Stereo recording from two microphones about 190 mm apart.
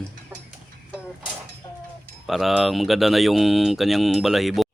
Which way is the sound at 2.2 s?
Centre (ahead or behind).